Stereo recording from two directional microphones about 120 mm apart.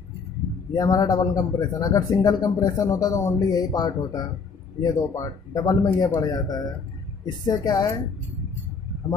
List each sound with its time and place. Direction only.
0.7 s speech: 30° left (ahead or behind)